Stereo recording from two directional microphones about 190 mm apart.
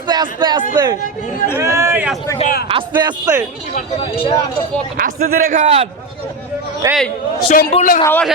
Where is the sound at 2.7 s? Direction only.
25° right (ahead or behind).